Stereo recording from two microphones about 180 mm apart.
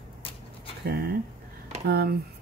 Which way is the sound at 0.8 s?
65° right (ahead or behind).